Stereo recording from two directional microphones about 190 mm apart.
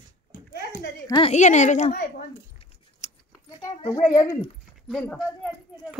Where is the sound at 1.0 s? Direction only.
25° left (ahead or behind).